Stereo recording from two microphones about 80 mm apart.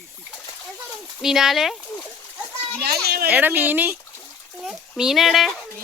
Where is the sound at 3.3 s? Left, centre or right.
Right.